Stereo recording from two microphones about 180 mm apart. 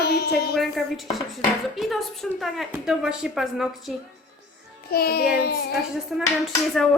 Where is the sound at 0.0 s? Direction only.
65° left (ahead or behind).